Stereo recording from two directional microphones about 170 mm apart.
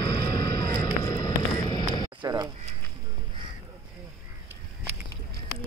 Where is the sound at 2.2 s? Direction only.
25° right (ahead or behind).